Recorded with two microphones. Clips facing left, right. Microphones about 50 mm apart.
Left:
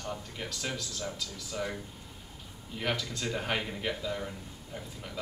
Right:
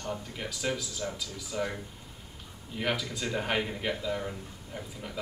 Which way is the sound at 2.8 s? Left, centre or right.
Centre.